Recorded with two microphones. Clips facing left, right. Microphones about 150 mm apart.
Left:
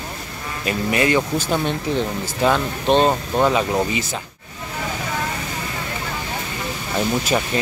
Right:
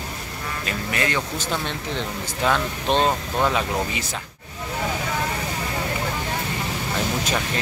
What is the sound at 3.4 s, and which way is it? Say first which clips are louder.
Speech: left 5 dB; 5° left (ahead or behind).